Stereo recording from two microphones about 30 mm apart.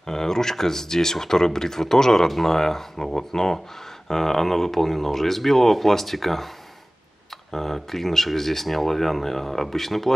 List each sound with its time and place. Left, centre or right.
0.0 s speech: centre
7.5 s speech: centre